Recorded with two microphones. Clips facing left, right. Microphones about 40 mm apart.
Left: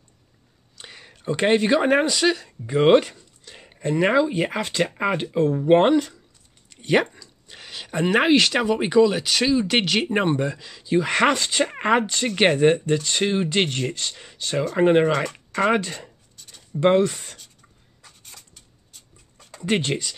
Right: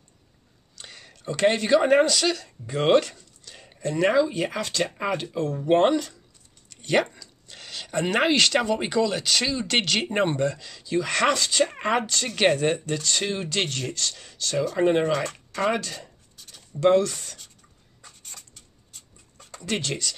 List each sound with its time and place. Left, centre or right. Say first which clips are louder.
0.7 s speech: left 2 dB; centre
15.3 s speech: left 3 dB; centre
15.7 s speech: left 5 dB; left
16.3 s writing: left 6 dB; centre
16.8 s speech: left 1 dB; left
18.0 s writing: right 1 dB; centre
19.6 s speech: left 5 dB; left